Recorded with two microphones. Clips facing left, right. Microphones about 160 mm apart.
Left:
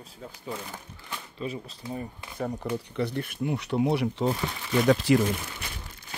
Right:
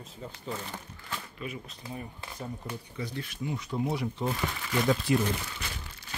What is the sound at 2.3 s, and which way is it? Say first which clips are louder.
Speech: left 9 dB; 70° left (ahead or behind).